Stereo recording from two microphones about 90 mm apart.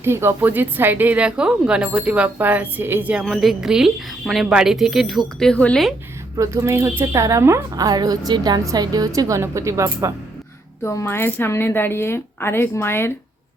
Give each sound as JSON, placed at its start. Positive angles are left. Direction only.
{"t": 0.0, "sound": "speech", "side_deg": -30}
{"t": 3.2, "sound": "a woman's voice", "side_deg": 0}
{"t": 6.3, "sound": "a woman's voice", "side_deg": -35}
{"t": 10.8, "sound": "speech", "side_deg": 30}